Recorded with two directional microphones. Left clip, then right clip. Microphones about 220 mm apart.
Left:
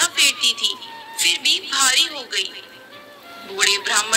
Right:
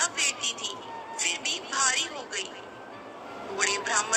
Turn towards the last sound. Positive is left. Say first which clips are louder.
# left 8 dB
turn(degrees=45)  # may be behind; listen again after turning